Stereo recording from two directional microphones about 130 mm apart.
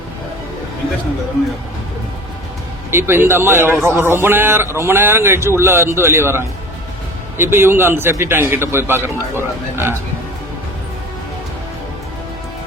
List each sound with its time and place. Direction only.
2.9 s a man's voice: 20° right (ahead or behind)